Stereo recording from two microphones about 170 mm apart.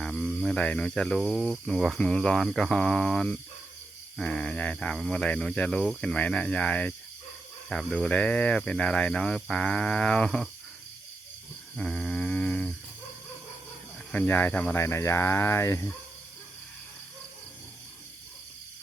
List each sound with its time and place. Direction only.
0.0 s speech: centre (ahead or behind)
11.8 s a sound: 5° left (ahead or behind)
14.1 s speech: 10° left (ahead or behind)